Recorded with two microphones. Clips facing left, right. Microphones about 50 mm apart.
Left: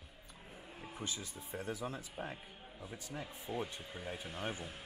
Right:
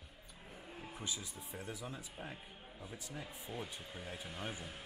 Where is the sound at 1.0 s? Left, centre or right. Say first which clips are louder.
Left 2 dB; centre.